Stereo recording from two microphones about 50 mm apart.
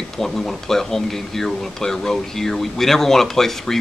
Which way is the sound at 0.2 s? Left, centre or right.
Centre.